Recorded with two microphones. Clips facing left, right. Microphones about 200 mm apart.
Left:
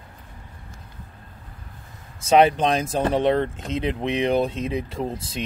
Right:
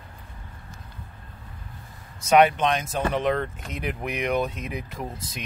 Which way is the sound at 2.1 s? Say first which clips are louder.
Left 2 dB; 30° left (ahead or behind).